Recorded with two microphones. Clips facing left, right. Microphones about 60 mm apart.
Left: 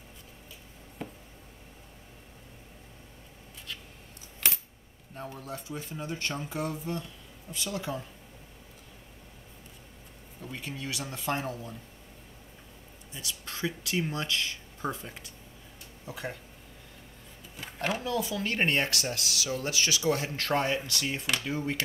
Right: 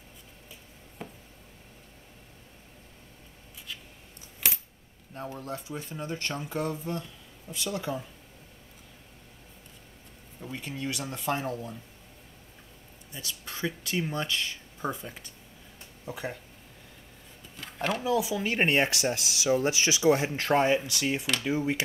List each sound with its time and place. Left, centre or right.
1.0 s a sound: centre
5.1 s speech: centre
10.4 s speech: centre
13.1 s speech: centre
17.7 s speech: centre
18.0 s speech: centre